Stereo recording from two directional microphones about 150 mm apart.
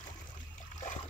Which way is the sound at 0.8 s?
55° left (ahead or behind).